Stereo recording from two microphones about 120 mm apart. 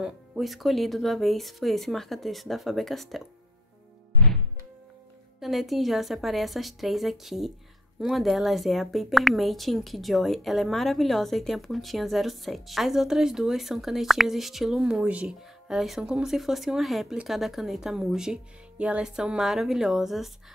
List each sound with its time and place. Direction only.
0.0 s a woman's voice: 5° right (ahead or behind)
5.4 s a woman's voice: centre (ahead or behind)